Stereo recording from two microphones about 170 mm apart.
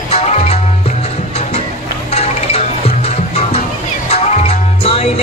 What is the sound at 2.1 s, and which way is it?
Music, 40° left (ahead or behind).